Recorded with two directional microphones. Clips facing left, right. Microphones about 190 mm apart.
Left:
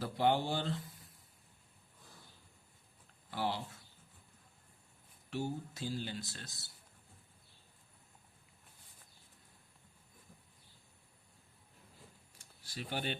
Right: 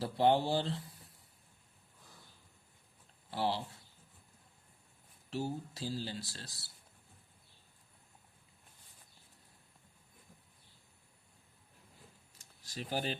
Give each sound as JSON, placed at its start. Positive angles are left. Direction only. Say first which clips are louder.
{"t": 0.0, "sound": "speech", "louder": "right 3 dB", "side_deg": -30}
{"t": 3.2, "sound": "speech", "louder": "right 2 dB", "side_deg": -30}
{"t": 5.3, "sound": "speech", "louder": "right 1 dB", "side_deg": -35}
{"t": 12.4, "sound": "a sound", "louder": "right 1 dB", "side_deg": -35}